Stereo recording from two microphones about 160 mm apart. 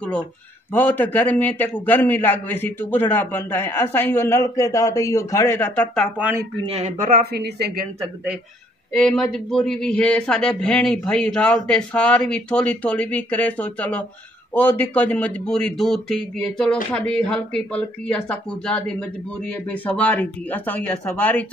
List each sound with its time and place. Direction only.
0.0 s a man's voice: 5° left (ahead or behind)
6.1 s speech: 10° right (ahead or behind)
6.6 s speech: 40° right (ahead or behind)
7.0 s a woman's voice: 65° right (ahead or behind); by 7.8 s 85° right
8.9 s a man's voice: 5° left (ahead or behind)